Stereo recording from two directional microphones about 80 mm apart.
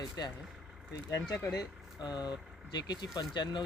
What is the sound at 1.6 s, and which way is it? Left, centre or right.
Speech, left.